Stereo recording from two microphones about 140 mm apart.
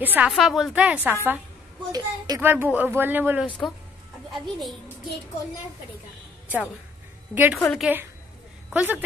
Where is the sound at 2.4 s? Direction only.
15° right (ahead or behind).